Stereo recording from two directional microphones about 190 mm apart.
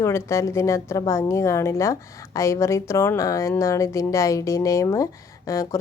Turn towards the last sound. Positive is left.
turn(degrees=15)  # may be behind; listen again after turning